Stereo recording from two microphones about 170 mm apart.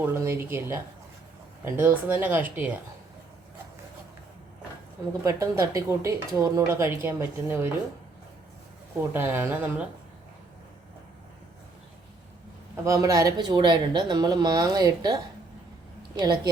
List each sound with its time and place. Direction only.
0.0 s speech: 15° right (ahead or behind)
5.2 s speech: 20° right (ahead or behind)
9.0 s speech: 15° right (ahead or behind)
12.8 s speech: 20° right (ahead or behind)